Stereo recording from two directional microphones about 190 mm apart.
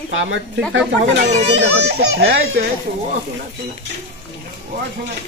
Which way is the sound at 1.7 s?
60° right (ahead or behind).